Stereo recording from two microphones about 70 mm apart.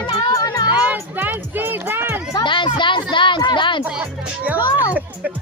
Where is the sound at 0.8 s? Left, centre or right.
Right.